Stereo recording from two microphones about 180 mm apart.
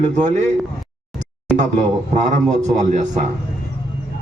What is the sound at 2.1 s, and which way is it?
A man's voice, 40° right (ahead or behind).